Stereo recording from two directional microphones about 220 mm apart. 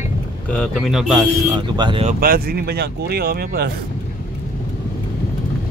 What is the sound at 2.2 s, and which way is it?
Speech, 45° right (ahead or behind).